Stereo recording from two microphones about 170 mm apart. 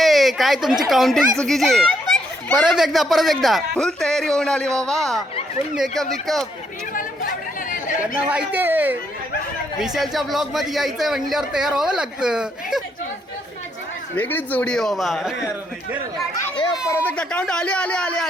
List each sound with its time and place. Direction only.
0.0 s a child's voice: centre (ahead or behind)
7.7 s chatter: 50° left (ahead or behind)
8.3 s a child's voice: 10° right (ahead or behind)
14.2 s a child's voice: 10° left (ahead or behind)
16.3 s speech: 25° left (ahead or behind)
16.9 s a man's voice: 10° left (ahead or behind)